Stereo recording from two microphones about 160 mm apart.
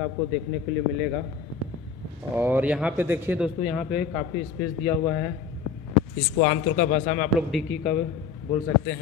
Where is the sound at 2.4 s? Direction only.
10° right (ahead or behind).